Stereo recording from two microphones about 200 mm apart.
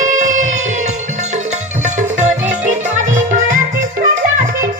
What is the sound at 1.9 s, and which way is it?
Music, 35° right (ahead or behind).